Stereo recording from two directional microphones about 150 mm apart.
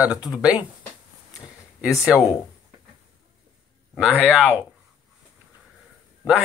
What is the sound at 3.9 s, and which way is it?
Speech, 5° right (ahead or behind).